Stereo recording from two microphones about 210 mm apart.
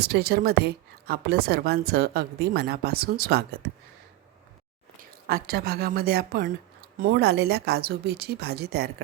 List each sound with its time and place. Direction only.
0.0 s a woman's voice: 50° right (ahead or behind)
5.3 s a woman's voice: 45° right (ahead or behind)